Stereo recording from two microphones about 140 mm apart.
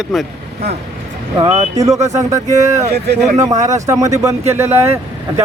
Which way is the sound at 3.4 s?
25° right (ahead or behind).